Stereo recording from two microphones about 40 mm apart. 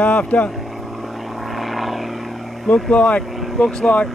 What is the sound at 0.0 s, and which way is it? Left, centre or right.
Speech, left.